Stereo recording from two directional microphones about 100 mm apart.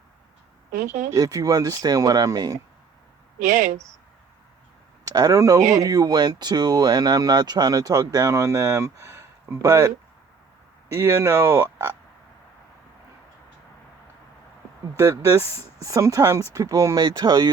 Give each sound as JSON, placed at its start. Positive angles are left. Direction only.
{"t": 1.1, "sound": "speech", "side_deg": -35}
{"t": 5.0, "sound": "speech", "side_deg": -35}
{"t": 14.9, "sound": "speech", "side_deg": -30}